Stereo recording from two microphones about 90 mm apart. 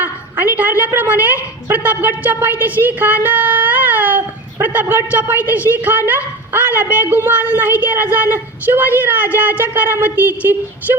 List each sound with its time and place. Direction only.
0.0 s a woman's voice: 20° right (ahead or behind)
3.2 s a sound: 20° right (ahead or behind)
4.6 s a woman's voice: 20° right (ahead or behind)